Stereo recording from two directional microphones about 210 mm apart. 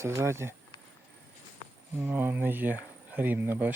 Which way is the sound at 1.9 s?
10° right (ahead or behind).